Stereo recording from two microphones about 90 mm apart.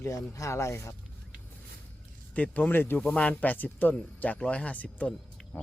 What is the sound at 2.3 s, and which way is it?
Speech, 15° left (ahead or behind).